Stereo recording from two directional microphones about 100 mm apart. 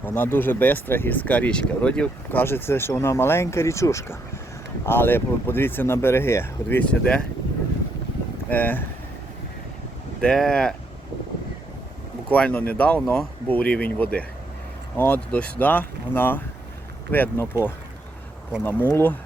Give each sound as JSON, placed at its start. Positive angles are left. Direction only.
{"t": 0.0, "sound": "speech", "side_deg": 20}
{"t": 2.4, "sound": "speech", "side_deg": 25}
{"t": 8.4, "sound": "speech", "side_deg": 15}
{"t": 10.2, "sound": "speech", "side_deg": 5}
{"t": 12.3, "sound": "speech", "side_deg": 10}